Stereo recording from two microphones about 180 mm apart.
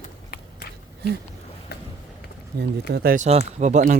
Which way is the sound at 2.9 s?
55° right (ahead or behind).